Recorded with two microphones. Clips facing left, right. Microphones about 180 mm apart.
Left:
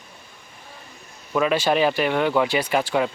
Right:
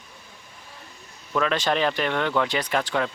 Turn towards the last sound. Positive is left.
turn(degrees=10)  # may be behind; listen again after turning